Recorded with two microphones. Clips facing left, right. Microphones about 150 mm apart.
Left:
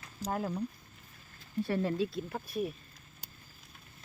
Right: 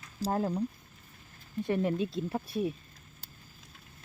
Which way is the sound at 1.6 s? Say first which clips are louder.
Right 3 dB; 20° right (ahead or behind).